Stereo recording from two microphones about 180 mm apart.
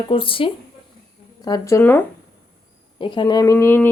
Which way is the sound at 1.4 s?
20° left (ahead or behind).